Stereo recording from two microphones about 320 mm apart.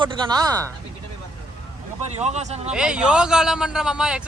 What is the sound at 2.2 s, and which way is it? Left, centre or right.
Speech, right.